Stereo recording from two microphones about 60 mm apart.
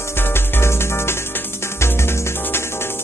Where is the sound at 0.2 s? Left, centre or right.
Left.